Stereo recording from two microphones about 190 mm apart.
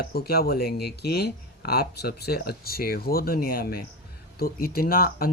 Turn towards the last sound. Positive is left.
turn(degrees=50)  # may be behind; listen again after turning